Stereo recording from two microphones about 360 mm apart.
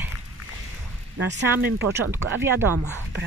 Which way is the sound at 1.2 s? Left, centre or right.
Right.